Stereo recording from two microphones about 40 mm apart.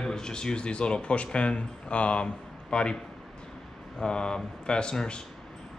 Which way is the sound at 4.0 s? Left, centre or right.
Left.